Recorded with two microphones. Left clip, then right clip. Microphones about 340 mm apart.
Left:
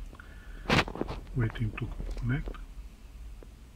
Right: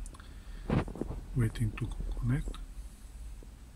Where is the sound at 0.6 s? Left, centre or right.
Left.